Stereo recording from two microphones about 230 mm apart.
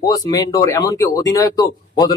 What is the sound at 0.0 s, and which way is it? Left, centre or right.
Speech, centre.